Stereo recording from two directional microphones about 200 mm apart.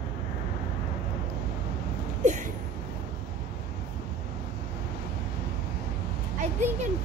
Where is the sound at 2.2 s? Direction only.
40° right (ahead or behind).